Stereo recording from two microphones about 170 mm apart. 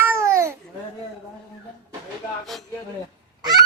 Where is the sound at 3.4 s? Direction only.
25° right (ahead or behind).